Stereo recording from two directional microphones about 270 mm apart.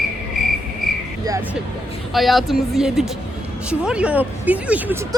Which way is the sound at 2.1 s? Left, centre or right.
Centre.